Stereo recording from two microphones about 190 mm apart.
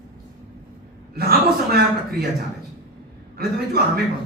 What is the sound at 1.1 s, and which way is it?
Speech, 55° right (ahead or behind).